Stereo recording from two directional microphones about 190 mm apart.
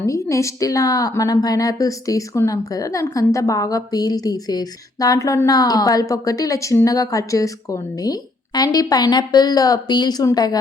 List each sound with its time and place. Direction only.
0.0 s a woman's voice: 15° left (ahead or behind)